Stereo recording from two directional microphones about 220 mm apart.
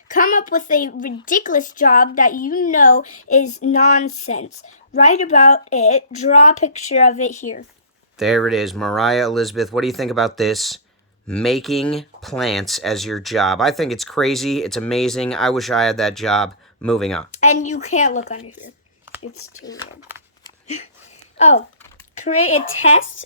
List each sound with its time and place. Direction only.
0.1 s a woman's voice: 35° left (ahead or behind)
3.1 s female singing: 80° left
4.3 s a woman's voice: 30° left (ahead or behind)
8.2 s speech: centre (ahead or behind)
17.4 s a woman's voice: 35° left (ahead or behind)
19.2 s speech: 75° left (ahead or behind)
21.3 s speech: 30° left (ahead or behind)
22.5 s speech: 65° left (ahead or behind)